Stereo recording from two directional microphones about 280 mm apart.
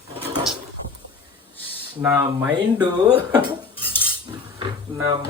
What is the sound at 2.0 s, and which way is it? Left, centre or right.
Speech, centre.